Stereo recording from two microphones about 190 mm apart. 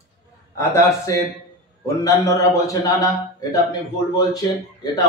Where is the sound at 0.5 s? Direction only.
15° left (ahead or behind).